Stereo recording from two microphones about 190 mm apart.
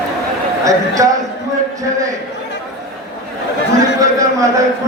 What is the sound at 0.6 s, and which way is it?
Speech, 15° right (ahead or behind).